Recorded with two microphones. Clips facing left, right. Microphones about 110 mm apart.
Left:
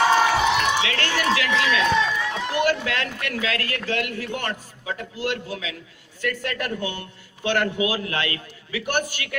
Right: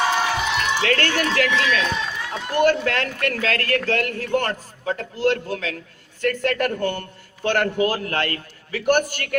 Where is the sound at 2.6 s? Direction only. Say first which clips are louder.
Right 5 dB; 45° right (ahead or behind).